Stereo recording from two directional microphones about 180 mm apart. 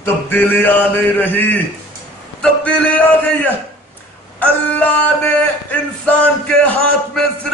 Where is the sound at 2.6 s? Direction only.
10° left (ahead or behind).